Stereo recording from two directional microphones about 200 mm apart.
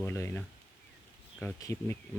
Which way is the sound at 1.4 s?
15° left (ahead or behind).